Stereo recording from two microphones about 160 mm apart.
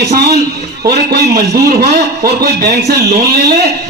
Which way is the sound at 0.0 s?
90° right.